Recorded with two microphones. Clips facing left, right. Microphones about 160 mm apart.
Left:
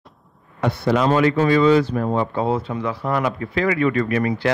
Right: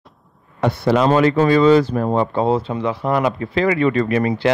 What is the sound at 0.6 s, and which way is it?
A man's voice, 35° right (ahead or behind).